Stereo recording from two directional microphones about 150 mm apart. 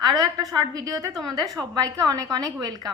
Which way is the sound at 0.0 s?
25° right (ahead or behind).